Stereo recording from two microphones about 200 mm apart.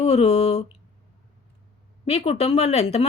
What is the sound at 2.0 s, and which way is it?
Speech, 30° left (ahead or behind).